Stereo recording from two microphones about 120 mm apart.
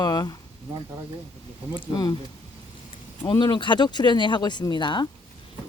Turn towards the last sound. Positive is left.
turn(degrees=40)  # may be behind; listen again after turning